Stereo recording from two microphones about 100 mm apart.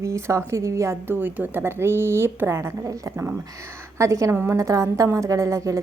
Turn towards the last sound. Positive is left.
turn(degrees=-30)  # may be behind; listen again after turning